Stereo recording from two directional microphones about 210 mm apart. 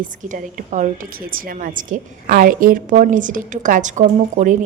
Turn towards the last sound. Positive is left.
turn(degrees=-35)  # may be behind; listen again after turning